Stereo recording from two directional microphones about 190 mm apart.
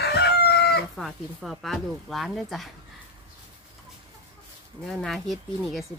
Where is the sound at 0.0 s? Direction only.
60° left (ahead or behind).